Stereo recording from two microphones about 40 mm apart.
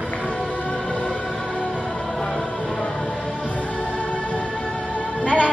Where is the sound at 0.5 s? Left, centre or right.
Left.